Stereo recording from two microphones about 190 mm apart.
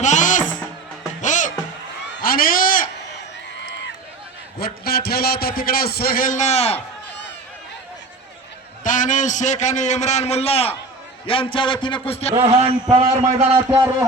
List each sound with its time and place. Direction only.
0.0 s music: 40° left (ahead or behind)
2.2 s a sound: 50° left (ahead or behind)
4.6 s a man's voice: 55° left (ahead or behind); by 6.7 s 35° left (ahead or behind)
8.8 s a man's voice: 45° left (ahead or behind)
12.3 s a man's voice: 30° right (ahead or behind)
13.5 s a man's voice: 15° right (ahead or behind)